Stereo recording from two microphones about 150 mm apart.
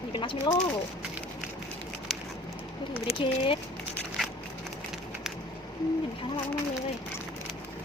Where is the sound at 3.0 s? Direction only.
35° left (ahead or behind).